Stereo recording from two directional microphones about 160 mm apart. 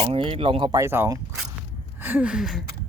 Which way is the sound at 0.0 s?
35° right (ahead or behind).